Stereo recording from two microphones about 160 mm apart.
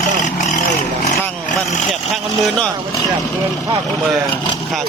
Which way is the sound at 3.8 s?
Centre (ahead or behind).